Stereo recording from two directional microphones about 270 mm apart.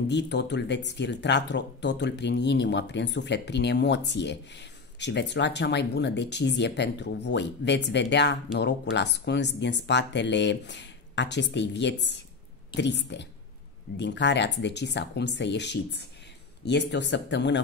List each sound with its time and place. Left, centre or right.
0.1 s speech: left